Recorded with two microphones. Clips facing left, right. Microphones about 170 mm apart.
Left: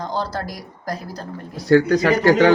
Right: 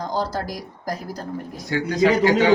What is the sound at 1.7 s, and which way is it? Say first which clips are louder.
Speech: left 4 dB; 55° left (ahead or behind).